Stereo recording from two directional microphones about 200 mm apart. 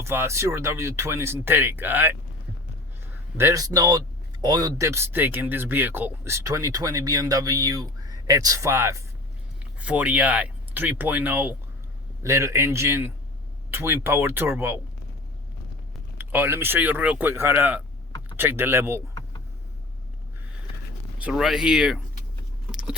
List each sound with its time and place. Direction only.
0.0 s speech: 15° right (ahead or behind)
3.3 s speech: 15° right (ahead or behind)
16.1 s speech: 10° right (ahead or behind)
21.2 s speech: 5° right (ahead or behind)
22.7 s a sound: 5° right (ahead or behind)